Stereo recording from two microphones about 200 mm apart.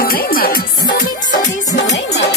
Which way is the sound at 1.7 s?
60° left (ahead or behind).